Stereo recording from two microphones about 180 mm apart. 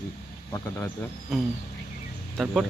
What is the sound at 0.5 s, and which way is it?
Speech, 15° left (ahead or behind).